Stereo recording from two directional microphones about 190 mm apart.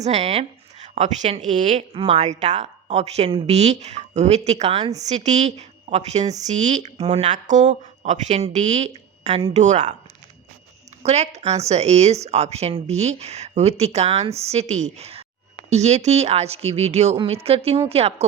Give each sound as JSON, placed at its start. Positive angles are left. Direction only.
{"t": 0.0, "sound": "a woman's voice", "side_deg": -35}
{"t": 11.0, "sound": "speech", "side_deg": -35}